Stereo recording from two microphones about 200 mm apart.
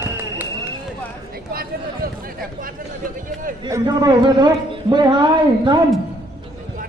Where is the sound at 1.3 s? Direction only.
50° right (ahead or behind).